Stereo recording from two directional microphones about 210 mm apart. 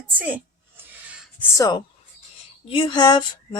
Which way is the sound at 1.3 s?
15° left (ahead or behind).